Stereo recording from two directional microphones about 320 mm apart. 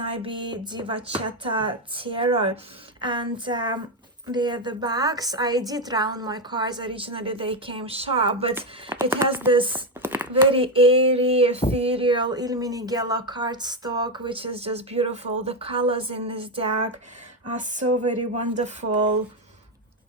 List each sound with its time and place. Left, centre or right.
0.0 s speech: centre
10.5 s speech: centre
17.6 s a sound: right